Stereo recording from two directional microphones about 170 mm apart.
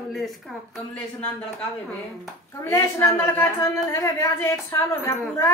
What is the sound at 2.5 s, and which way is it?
A woman's voice, 15° left (ahead or behind).